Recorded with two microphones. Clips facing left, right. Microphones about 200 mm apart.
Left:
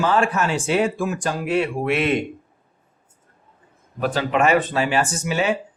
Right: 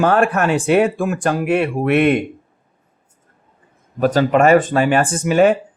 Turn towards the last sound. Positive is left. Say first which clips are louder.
# right 9 dB
turn(degrees=-50)  # may be behind; listen again after turning